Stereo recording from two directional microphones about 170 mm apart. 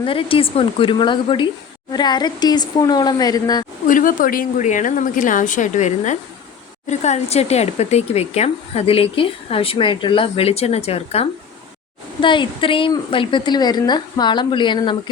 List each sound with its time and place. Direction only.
0.0 s a woman's voice: 30° left (ahead or behind)
3.8 s a woman's voice: 50° left (ahead or behind); by 14.9 s 30° left (ahead or behind)